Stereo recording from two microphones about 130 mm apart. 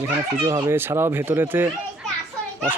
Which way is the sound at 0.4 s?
20° right (ahead or behind).